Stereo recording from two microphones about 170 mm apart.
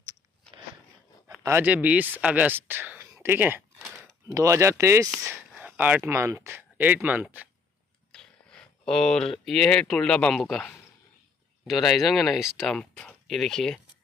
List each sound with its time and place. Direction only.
1.4 s speech: 10° right (ahead or behind)
5.5 s speech: 5° right (ahead or behind)
8.1 s speech: 5° left (ahead or behind)